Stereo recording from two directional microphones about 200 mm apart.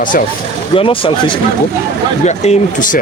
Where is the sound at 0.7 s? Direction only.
25° left (ahead or behind).